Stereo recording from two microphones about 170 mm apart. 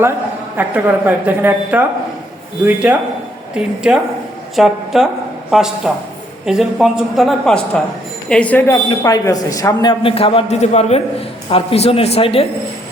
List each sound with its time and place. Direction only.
0.5 s a woman's voice: 10° right (ahead or behind); by 12.5 s 35° left (ahead or behind)